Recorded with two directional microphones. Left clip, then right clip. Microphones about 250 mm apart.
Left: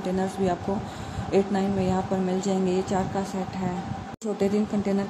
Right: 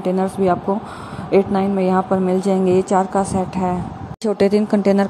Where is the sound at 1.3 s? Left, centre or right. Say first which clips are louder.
Right 8 dB; centre.